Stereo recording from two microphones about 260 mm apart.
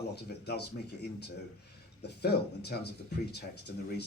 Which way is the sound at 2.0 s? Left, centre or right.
Left.